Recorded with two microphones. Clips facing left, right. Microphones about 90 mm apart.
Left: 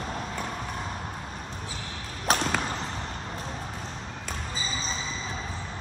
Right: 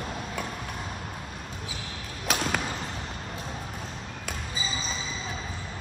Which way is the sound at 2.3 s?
40° left (ahead or behind).